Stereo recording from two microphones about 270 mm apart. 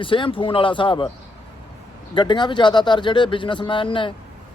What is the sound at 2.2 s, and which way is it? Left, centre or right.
Speech, centre.